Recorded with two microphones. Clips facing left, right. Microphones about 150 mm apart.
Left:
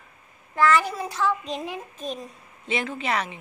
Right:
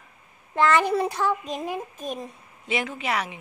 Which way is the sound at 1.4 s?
45° right (ahead or behind).